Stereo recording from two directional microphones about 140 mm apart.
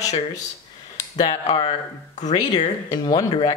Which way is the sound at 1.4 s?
45° left (ahead or behind).